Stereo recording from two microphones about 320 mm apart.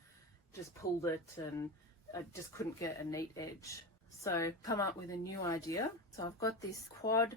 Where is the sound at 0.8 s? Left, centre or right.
Left.